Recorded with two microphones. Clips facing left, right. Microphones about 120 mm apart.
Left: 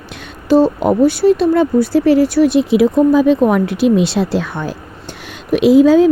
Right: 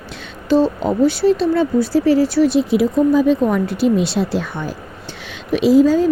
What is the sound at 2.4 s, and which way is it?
Speech, 65° left (ahead or behind).